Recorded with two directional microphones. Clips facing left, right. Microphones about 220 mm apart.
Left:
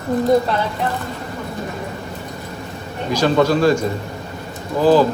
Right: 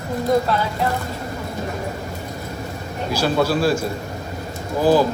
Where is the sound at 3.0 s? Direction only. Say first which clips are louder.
Left 4 dB; 5° right (ahead or behind).